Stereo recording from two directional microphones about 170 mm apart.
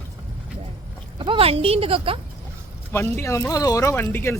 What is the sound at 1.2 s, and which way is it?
Speech, 30° right (ahead or behind).